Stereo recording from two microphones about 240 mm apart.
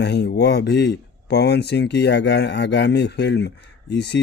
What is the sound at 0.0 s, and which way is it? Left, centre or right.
Speech, left.